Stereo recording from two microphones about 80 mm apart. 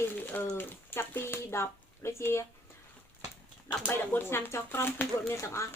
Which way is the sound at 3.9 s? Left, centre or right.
Left.